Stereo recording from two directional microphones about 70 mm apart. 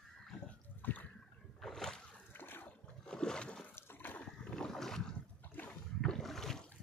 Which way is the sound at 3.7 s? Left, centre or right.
Left.